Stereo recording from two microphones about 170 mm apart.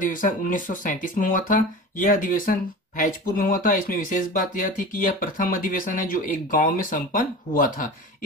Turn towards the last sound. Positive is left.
turn(degrees=55)  # may be behind; listen again after turning